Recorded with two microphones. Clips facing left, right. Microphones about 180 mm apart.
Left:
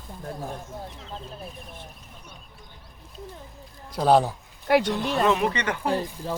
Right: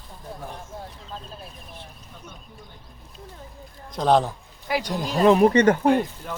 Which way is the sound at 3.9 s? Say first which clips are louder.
Even; 10° left (ahead or behind).